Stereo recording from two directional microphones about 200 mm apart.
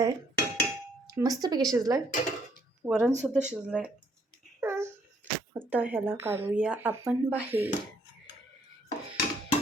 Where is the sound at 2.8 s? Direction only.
10° right (ahead or behind).